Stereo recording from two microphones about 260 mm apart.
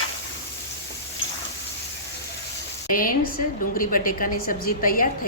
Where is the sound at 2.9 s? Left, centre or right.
Left.